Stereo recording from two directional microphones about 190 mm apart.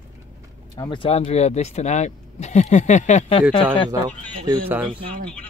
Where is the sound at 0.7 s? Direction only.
20° left (ahead or behind).